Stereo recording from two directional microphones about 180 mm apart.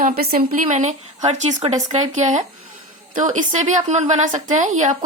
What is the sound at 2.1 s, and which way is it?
Speech, 40° right (ahead or behind).